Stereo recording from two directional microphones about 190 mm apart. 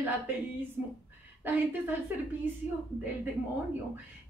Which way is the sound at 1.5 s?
10° right (ahead or behind).